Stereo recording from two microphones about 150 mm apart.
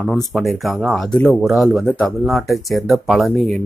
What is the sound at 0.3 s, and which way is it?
Speech, centre (ahead or behind).